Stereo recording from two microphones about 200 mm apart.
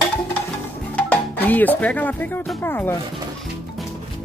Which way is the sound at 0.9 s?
5° left (ahead or behind).